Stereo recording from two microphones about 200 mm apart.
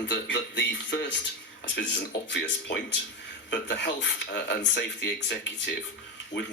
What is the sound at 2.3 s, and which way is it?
Speech, 60° left (ahead or behind).